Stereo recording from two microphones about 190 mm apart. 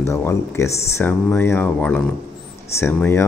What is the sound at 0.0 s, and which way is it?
Speech, 15° left (ahead or behind).